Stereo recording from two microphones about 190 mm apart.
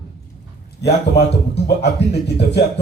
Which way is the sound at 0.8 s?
65° left (ahead or behind).